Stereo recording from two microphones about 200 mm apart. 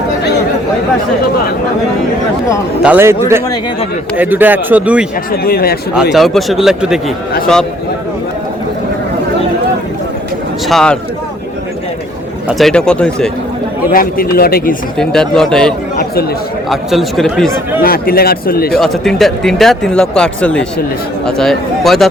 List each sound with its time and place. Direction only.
2.8 s a man's voice: 10° right (ahead or behind)
5.3 s speech: 50° left (ahead or behind)
5.9 s speech: 5° right (ahead or behind)
10.7 s speech: centre (ahead or behind)
12.5 s speech: centre (ahead or behind)
13.9 s speech: 45° left (ahead or behind)
14.9 s speech: 5° left (ahead or behind)
17.8 s speech: 50° left (ahead or behind)
18.8 s speech: centre (ahead or behind)